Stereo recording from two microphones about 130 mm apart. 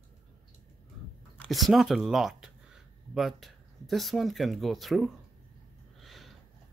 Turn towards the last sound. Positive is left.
turn(degrees=0)  # may be behind; listen again after turning